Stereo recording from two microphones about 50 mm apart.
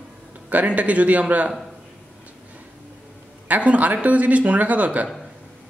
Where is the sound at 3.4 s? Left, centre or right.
Right.